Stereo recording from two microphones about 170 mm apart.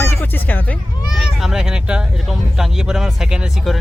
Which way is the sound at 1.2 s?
Centre (ahead or behind).